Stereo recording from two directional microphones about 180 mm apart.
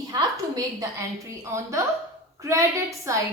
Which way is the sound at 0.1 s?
20° right (ahead or behind).